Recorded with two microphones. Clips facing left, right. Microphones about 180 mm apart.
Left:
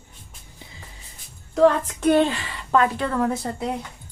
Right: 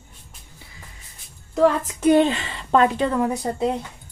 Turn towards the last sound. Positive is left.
turn(degrees=-15)  # may be behind; listen again after turning